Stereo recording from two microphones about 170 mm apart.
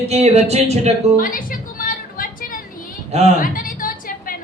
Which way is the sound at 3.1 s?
40° right (ahead or behind).